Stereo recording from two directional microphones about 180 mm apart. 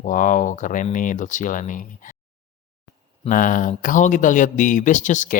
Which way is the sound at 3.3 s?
50° left (ahead or behind).